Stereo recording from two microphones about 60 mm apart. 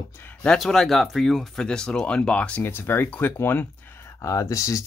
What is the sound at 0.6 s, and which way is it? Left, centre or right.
Speech, centre.